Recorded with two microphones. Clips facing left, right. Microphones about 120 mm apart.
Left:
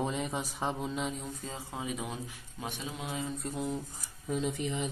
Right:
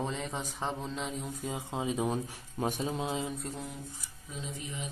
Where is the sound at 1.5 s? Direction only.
20° right (ahead or behind).